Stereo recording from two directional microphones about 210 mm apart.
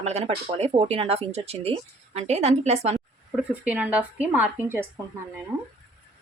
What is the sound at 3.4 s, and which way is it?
Speech, 5° right (ahead or behind).